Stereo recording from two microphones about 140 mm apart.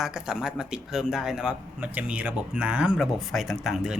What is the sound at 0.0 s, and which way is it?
Speech, 5° right (ahead or behind).